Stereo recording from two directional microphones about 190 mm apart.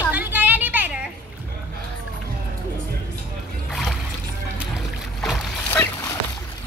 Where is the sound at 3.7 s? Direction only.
Centre (ahead or behind).